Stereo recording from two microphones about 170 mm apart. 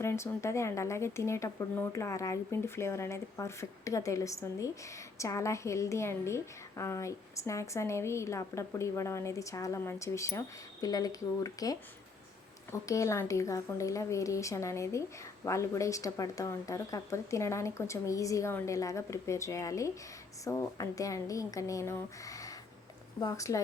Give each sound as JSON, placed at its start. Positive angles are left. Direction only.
{"t": 0.0, "sound": "a woman's voice", "side_deg": 15}